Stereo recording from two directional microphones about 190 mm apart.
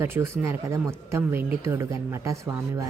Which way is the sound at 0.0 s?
15° right (ahead or behind).